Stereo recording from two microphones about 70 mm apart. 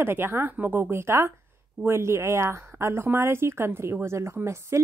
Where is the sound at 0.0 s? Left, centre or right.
Right.